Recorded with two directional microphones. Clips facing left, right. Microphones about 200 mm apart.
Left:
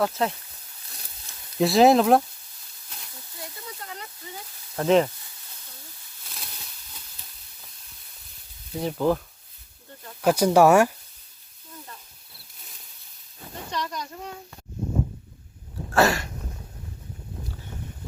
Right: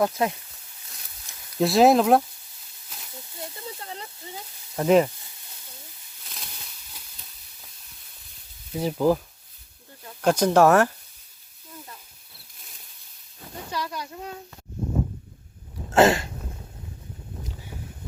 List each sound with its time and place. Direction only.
0.0 s speech: 10° right (ahead or behind)
1.5 s speech: centre (ahead or behind)
3.3 s snake: 25° right (ahead or behind)
4.8 s speech: 10° right (ahead or behind)
8.8 s speech: 5° right (ahead or behind)
10.2 s speech: 10° left (ahead or behind)
13.7 s speech: 5° right (ahead or behind)
15.9 s a sound: 25° right (ahead or behind)